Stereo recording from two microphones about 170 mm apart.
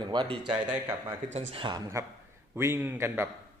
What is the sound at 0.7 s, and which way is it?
Speech, 10° right (ahead or behind).